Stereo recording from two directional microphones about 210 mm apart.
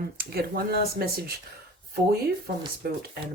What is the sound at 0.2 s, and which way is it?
Speech, 50° right (ahead or behind).